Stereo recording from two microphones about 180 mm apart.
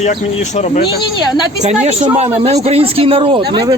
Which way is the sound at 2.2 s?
35° right (ahead or behind).